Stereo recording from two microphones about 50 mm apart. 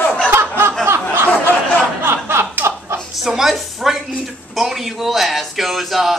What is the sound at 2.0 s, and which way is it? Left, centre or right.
Chuckle, right.